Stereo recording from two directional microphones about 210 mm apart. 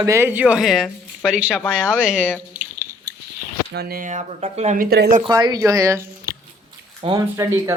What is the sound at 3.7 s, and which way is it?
Speech, 45° right (ahead or behind).